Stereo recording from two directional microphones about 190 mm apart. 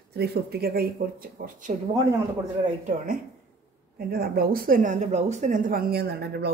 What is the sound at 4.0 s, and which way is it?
Speech, 50° right (ahead or behind).